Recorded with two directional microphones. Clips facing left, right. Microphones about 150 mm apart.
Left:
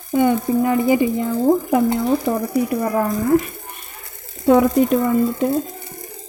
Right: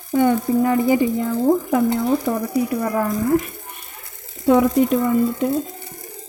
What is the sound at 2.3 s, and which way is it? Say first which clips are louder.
Speech: left 1 dB; 25° left (ahead or behind).